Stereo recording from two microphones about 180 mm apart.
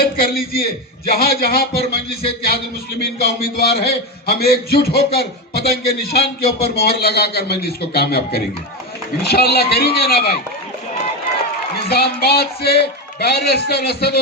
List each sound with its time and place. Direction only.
0.0 s a man's voice: 55° left (ahead or behind)
11.9 s a man's voice: 65° left (ahead or behind)